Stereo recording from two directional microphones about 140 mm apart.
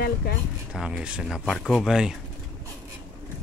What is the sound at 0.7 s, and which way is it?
Speech, 5° right (ahead or behind).